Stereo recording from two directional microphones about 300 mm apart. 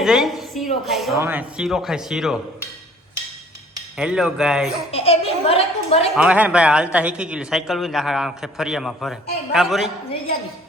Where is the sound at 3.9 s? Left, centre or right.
Centre.